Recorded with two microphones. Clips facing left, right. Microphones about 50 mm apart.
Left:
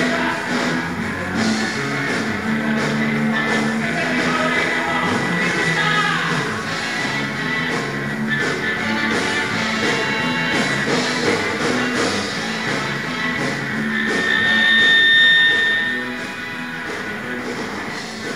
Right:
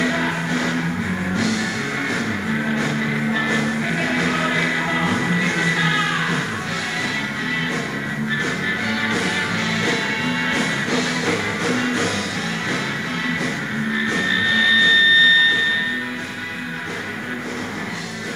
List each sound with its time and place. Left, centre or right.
0.5 s music: left
4.5 s music: centre
5.9 s music: centre
8.5 s music: left
14.3 s music: centre